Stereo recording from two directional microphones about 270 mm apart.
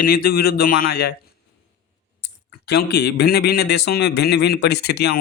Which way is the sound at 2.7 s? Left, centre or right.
Left.